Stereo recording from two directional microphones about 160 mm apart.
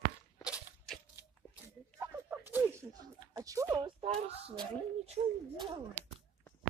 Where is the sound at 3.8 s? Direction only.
40° right (ahead or behind).